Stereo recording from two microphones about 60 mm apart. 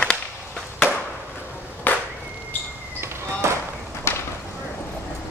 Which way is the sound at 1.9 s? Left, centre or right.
Left.